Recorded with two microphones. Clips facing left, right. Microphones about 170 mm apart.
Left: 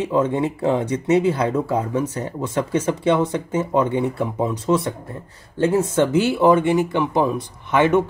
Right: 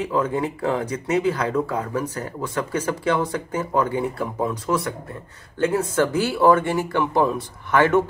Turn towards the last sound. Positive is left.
turn(degrees=20)  # may be behind; listen again after turning